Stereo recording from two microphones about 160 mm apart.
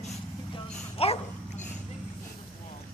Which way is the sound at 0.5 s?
35° left (ahead or behind).